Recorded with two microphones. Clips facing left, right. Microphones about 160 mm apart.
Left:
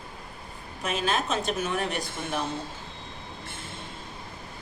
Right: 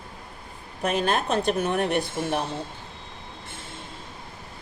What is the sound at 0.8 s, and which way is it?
A woman's voice, 60° right (ahead or behind).